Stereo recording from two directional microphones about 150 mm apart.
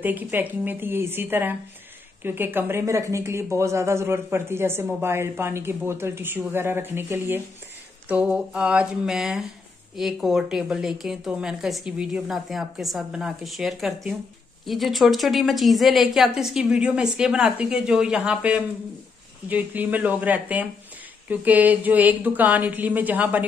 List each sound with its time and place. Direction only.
0.0 s a woman's voice: 10° right (ahead or behind)